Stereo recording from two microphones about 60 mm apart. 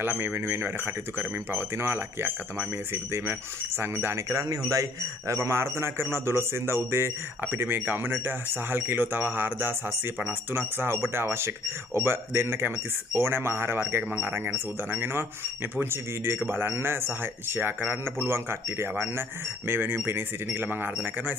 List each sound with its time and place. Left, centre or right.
0.0 s speech: right
4.5 s a man's voice: right
5.3 s a man's voice: right